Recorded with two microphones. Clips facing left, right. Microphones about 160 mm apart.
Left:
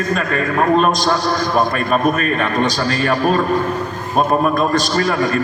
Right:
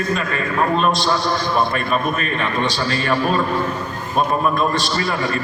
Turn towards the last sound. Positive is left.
turn(degrees=45)  # may be behind; listen again after turning